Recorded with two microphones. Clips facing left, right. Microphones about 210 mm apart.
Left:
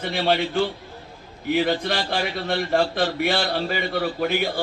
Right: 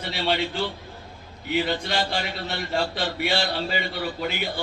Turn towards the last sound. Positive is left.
turn(degrees=50)  # may be behind; listen again after turning